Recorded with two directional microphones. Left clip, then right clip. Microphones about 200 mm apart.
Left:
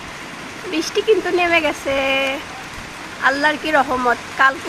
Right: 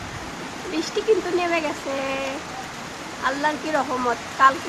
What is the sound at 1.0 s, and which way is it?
Speech, 15° left (ahead or behind).